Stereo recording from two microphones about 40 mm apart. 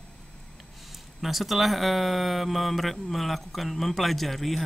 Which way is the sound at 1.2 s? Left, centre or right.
Centre.